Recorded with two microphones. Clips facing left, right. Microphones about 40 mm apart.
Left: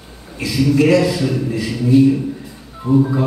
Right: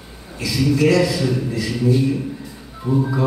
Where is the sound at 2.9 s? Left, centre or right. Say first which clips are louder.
Left 5 dB; centre.